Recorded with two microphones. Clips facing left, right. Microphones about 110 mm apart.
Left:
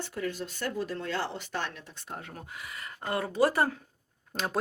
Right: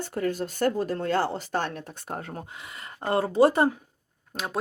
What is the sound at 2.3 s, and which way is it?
A woman's voice, 25° right (ahead or behind).